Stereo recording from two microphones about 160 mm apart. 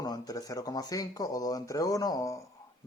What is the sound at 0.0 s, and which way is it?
Speech, 25° left (ahead or behind).